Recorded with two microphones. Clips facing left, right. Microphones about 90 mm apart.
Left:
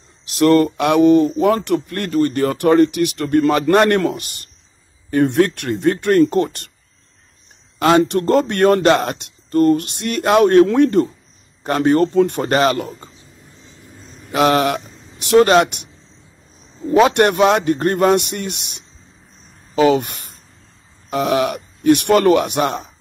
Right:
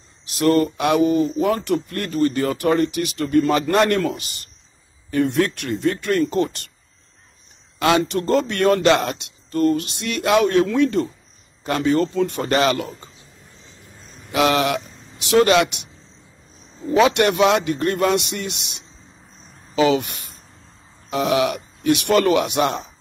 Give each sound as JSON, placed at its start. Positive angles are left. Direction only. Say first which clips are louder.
{"t": 0.2, "sound": "speech", "louder": "left 4 dB", "side_deg": 60}
{"t": 8.0, "sound": "speech", "louder": "left 4 dB", "side_deg": 55}
{"t": 14.3, "sound": "speech", "louder": "left 3 dB", "side_deg": 45}
{"t": 17.0, "sound": "speech", "louder": "left 3 dB", "side_deg": 50}